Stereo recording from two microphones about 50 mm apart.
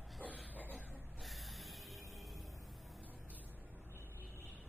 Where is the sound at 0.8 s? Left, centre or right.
Right.